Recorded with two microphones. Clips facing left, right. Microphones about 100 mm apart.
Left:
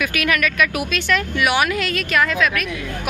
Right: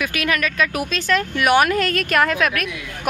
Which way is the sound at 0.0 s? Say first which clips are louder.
Left 1 dB; 25° right (ahead or behind).